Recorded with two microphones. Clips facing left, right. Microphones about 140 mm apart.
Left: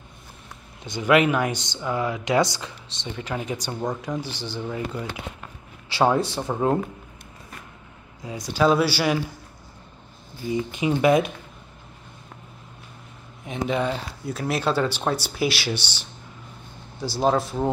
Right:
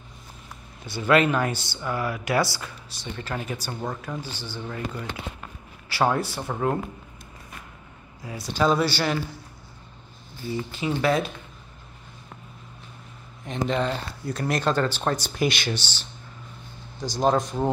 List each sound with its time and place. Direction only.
0.8 s speech: 15° left (ahead or behind)
8.2 s speech: 15° left (ahead or behind)
10.5 s speech: 15° left (ahead or behind)
13.5 s speech: 5° left (ahead or behind)